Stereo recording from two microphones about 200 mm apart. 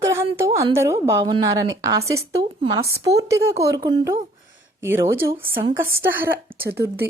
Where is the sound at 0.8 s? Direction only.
15° right (ahead or behind).